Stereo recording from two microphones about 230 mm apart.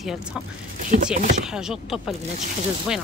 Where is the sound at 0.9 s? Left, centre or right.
Right.